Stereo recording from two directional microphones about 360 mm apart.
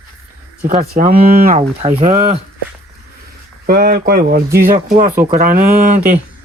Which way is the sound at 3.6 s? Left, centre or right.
Right.